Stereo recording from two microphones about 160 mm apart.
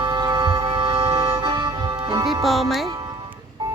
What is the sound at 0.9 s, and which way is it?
Music, 15° right (ahead or behind).